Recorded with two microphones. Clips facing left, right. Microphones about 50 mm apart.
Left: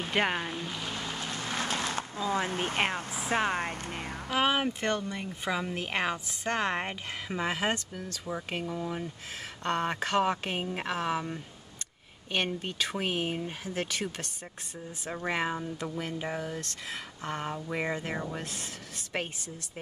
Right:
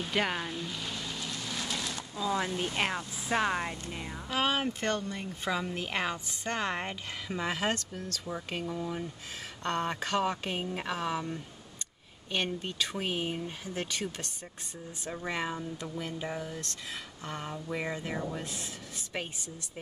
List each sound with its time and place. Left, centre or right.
0.0 s boat: left
3.5 s speech: left
4.3 s speech: centre
18.4 s speech: left
19.1 s speech: left